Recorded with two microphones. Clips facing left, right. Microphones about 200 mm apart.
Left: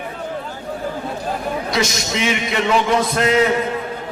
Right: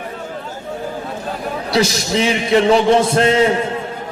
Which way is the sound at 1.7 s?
35° right (ahead or behind).